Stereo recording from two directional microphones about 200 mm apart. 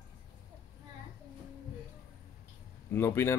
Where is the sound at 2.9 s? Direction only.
10° left (ahead or behind).